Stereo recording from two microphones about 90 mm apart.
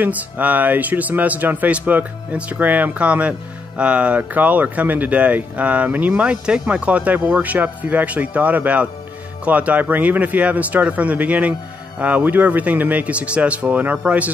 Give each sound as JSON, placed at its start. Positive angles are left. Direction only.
{"t": 0.0, "sound": "speech", "side_deg": -15}